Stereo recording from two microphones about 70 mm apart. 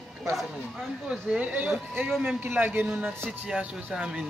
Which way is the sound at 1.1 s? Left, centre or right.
Centre.